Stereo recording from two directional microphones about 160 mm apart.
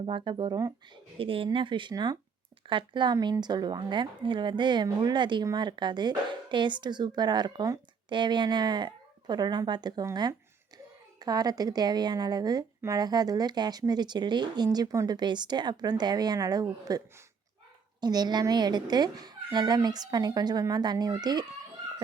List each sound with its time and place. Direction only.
0.0 s speech: 30° right (ahead or behind)